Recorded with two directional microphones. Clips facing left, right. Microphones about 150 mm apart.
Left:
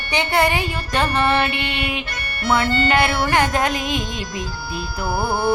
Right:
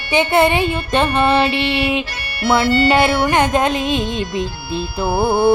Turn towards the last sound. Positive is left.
turn(degrees=-55)  # may be behind; listen again after turning